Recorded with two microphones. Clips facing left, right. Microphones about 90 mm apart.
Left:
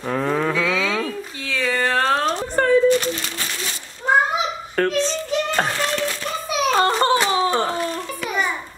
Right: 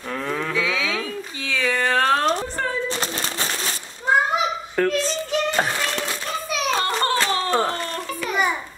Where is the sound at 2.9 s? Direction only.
30° right (ahead or behind).